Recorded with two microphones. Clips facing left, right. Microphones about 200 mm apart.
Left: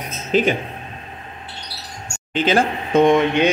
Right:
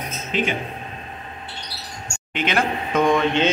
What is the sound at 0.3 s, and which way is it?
Speech, 40° left (ahead or behind).